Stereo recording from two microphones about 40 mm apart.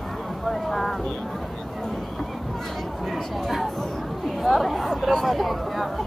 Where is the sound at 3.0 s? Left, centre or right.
Centre.